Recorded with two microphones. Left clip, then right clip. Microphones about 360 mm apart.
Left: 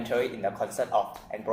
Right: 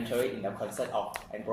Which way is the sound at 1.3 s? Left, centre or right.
Left.